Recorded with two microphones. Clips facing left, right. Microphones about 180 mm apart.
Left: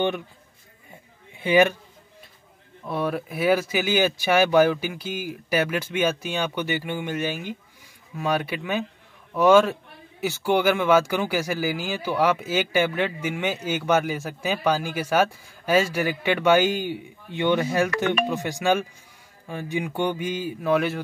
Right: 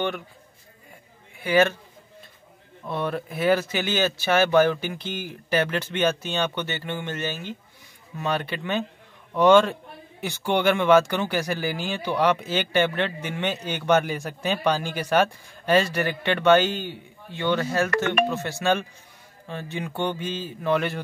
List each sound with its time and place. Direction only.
1.4 s speech: 15° left (ahead or behind)
2.9 s a man's voice: 10° left (ahead or behind)